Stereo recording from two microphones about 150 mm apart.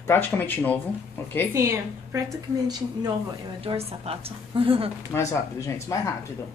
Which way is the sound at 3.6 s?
40° right (ahead or behind).